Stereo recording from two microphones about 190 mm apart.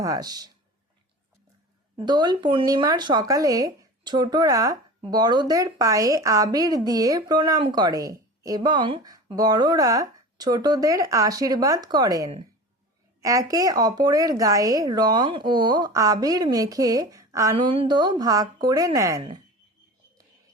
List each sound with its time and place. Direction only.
0.0 s speech: 20° right (ahead or behind)
2.0 s speech: 20° right (ahead or behind)